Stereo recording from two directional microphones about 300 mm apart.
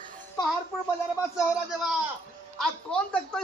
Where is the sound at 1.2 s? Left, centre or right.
Centre.